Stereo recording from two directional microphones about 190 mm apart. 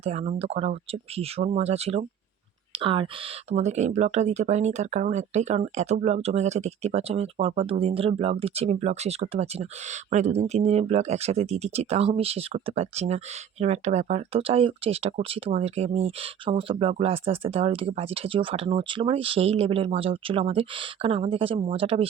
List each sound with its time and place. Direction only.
0.0 s speech: 35° right (ahead or behind)
3.5 s speech: 35° right (ahead or behind)